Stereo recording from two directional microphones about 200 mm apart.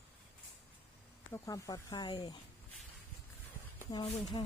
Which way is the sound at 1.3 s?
15° left (ahead or behind).